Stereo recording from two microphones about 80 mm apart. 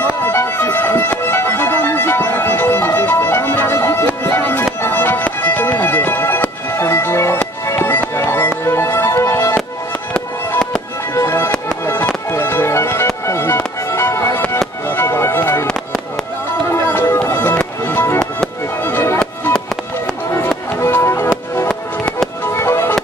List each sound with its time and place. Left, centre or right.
0.2 s music: left
11.1 s music: left
16.6 s music: left
20.8 s music: left
21.6 s music: centre
22.5 s music: left